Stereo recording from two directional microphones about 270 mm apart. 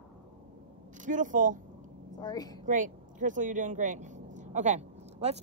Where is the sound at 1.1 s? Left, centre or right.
Right.